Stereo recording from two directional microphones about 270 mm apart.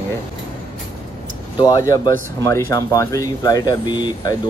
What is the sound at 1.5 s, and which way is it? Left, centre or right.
Speech, centre.